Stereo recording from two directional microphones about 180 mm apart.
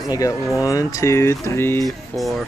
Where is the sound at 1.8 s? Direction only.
Centre (ahead or behind).